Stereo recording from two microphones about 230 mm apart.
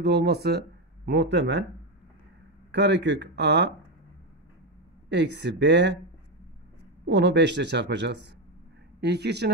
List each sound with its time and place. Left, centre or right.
0.0 s speech: right
2.7 s speech: right
5.1 s speech: right
7.1 s speech: right